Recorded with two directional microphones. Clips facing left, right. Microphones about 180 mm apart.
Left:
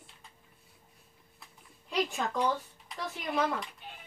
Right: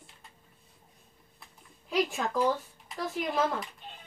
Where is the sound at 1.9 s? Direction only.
Centre (ahead or behind).